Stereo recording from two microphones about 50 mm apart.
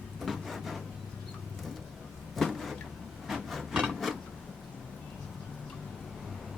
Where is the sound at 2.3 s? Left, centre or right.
Centre.